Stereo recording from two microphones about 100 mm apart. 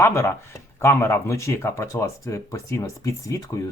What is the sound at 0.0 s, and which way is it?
Speech, 25° left (ahead or behind).